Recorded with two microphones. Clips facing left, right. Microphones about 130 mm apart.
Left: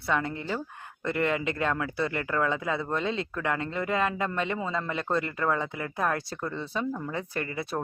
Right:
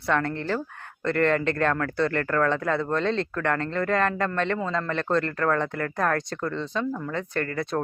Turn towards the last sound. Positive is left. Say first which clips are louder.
# right 4 dB
turn(degrees=15)  # may be behind; listen again after turning